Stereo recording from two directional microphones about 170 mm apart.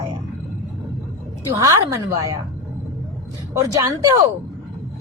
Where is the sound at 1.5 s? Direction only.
20° right (ahead or behind).